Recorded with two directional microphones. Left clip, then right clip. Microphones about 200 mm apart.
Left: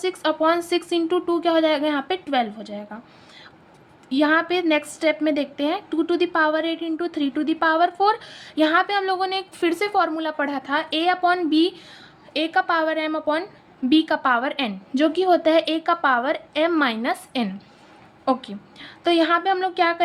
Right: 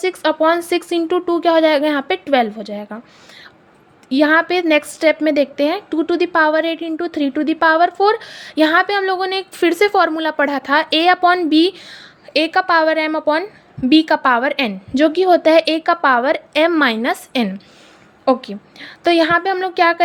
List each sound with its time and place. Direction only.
0.0 s a woman's voice: 30° right (ahead or behind)
4.1 s a woman's voice: 30° right (ahead or behind)